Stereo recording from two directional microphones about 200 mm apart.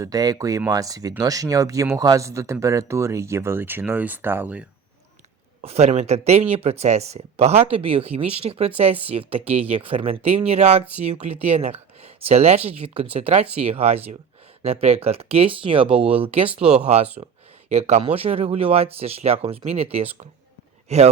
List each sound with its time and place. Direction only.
0.0 s speech: 20° right (ahead or behind)
5.6 s speech: 30° right (ahead or behind)